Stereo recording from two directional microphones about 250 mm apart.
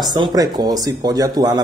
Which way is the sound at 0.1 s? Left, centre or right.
Centre.